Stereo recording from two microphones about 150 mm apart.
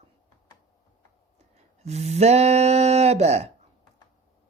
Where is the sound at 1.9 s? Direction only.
45° right (ahead or behind).